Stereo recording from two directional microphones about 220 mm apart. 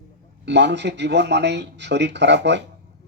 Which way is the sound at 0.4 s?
50° right (ahead or behind).